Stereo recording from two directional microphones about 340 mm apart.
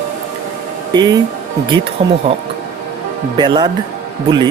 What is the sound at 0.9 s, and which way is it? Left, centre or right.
Speech, centre.